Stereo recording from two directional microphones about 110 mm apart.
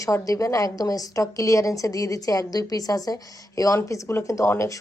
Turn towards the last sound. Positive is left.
turn(degrees=30)  # may be behind; listen again after turning